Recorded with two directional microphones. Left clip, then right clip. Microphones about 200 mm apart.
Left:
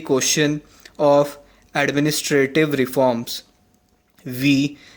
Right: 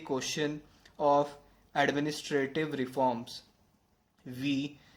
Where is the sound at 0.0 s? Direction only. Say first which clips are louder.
Left 14 dB; 40° left (ahead or behind).